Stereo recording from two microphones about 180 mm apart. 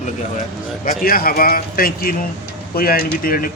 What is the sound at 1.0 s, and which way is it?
Speech, 55° left (ahead or behind).